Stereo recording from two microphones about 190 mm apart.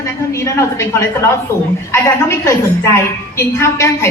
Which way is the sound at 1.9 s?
15° left (ahead or behind).